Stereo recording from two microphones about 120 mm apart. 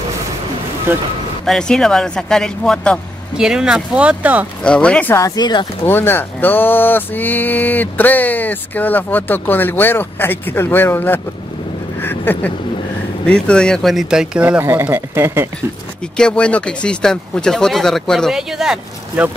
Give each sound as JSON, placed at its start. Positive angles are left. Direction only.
{"t": 0.9, "sound": "speech", "side_deg": -20}
{"t": 1.4, "sound": "speech", "side_deg": 5}
{"t": 3.3, "sound": "speech", "side_deg": -5}
{"t": 4.6, "sound": "speech", "side_deg": 10}
{"t": 5.1, "sound": "speech", "side_deg": 30}
{"t": 5.9, "sound": "speech", "side_deg": 20}
{"t": 12.0, "sound": "a sound", "side_deg": 15}
{"t": 13.3, "sound": "speech", "side_deg": 5}
{"t": 14.6, "sound": "speech", "side_deg": -20}
{"t": 16.2, "sound": "speech", "side_deg": 10}